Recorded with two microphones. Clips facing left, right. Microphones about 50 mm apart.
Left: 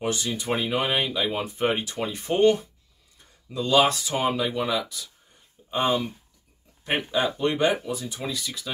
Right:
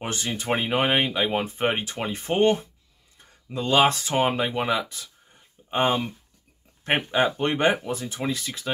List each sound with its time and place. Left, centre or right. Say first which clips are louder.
0.0 s speech: left 2 dB; right